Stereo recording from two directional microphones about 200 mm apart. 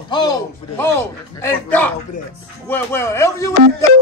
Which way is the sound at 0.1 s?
20° left (ahead or behind).